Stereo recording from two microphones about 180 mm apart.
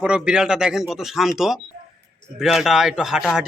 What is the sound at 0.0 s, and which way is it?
A man's voice, 5° right (ahead or behind).